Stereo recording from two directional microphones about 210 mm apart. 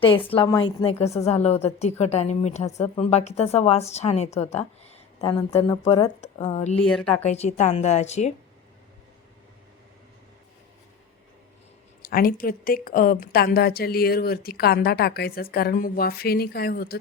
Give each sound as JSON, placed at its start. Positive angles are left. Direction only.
{"t": 0.0, "sound": "a woman's voice", "side_deg": 25}
{"t": 5.2, "sound": "speech", "side_deg": 20}
{"t": 6.8, "sound": "speech", "side_deg": 5}
{"t": 7.3, "sound": "a woman's voice", "side_deg": 30}
{"t": 12.0, "sound": "a woman's voice", "side_deg": 45}